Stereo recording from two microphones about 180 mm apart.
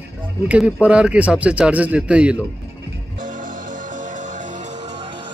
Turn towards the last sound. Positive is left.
turn(degrees=-45)  # may be behind; listen again after turning